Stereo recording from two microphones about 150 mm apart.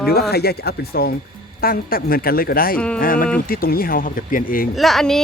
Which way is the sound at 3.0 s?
70° left (ahead or behind).